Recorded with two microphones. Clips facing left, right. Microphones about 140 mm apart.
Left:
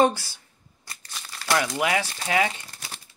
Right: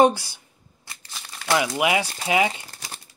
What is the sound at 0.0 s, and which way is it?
Speech, 15° right (ahead or behind).